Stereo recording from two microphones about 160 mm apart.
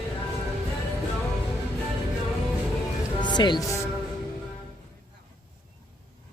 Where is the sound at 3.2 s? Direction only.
30° left (ahead or behind).